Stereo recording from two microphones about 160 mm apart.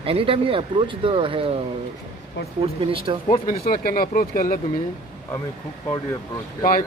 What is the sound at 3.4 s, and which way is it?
Speech, 65° left (ahead or behind).